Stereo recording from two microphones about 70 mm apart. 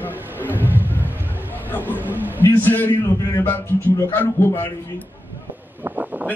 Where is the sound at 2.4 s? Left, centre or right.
Left.